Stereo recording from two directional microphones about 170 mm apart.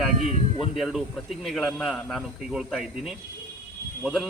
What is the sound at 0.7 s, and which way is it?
Speech, centre (ahead or behind).